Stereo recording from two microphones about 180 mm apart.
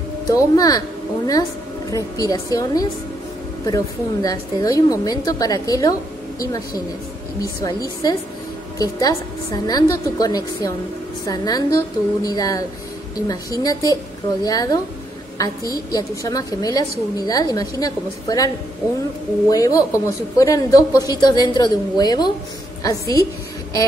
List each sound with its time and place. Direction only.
0.3 s a woman's voice: 20° left (ahead or behind)
19.5 s a woman's voice: 20° left (ahead or behind)